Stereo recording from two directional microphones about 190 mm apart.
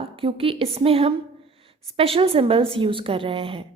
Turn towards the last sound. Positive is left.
turn(degrees=-25)  # may be behind; listen again after turning